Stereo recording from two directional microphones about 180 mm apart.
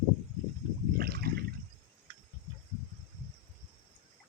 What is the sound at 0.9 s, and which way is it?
Water, 60° right (ahead or behind).